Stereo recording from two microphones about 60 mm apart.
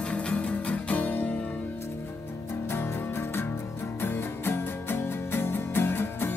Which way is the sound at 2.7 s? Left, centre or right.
Left.